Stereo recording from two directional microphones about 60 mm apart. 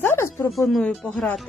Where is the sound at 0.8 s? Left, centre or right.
Left.